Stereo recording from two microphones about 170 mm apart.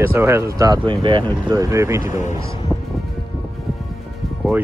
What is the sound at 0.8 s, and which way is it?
Speech, 30° right (ahead or behind).